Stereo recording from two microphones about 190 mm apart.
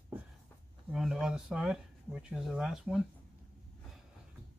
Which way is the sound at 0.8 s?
Centre (ahead or behind).